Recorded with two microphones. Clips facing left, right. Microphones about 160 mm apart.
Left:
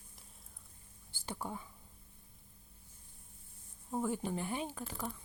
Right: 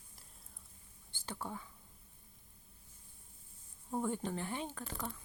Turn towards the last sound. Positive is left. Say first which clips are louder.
# left 2 dB
turn(degrees=10)  # may be behind; listen again after turning